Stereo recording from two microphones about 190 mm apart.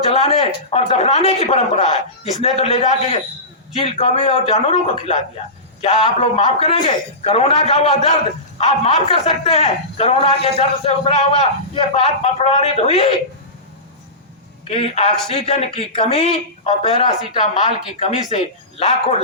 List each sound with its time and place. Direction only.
0.1 s speech: 30° left (ahead or behind)
14.7 s speech: 30° left (ahead or behind)